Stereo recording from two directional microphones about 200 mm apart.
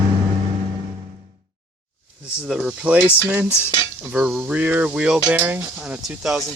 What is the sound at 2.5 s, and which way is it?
Speech, 5° right (ahead or behind).